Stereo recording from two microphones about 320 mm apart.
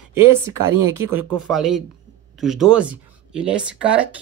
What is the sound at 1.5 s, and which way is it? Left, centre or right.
Speech, centre.